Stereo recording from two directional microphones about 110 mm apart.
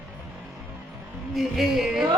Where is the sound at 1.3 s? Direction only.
Centre (ahead or behind).